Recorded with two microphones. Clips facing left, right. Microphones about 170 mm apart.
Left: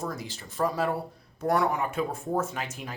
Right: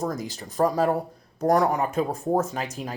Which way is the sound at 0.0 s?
40° right (ahead or behind).